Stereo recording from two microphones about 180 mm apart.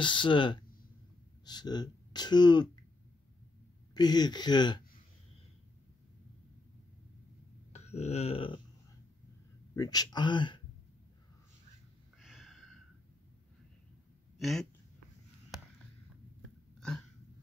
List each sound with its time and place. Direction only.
0.0 s speech: 25° left (ahead or behind)
3.9 s speech: 25° left (ahead or behind)
7.7 s a sound: 35° left (ahead or behind)
9.8 s speech: 20° left (ahead or behind)
12.2 s a sound: centre (ahead or behind)
14.4 s speech: centre (ahead or behind)